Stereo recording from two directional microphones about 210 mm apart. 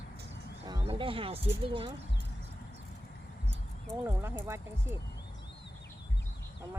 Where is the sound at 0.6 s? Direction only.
15° right (ahead or behind).